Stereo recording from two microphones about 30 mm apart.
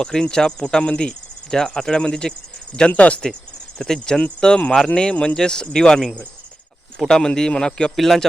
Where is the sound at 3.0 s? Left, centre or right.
Left.